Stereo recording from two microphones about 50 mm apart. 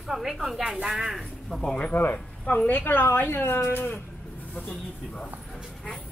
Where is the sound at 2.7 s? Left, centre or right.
Left.